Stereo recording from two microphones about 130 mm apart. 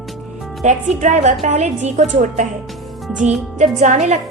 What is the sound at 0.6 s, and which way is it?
A woman's voice, 70° right (ahead or behind).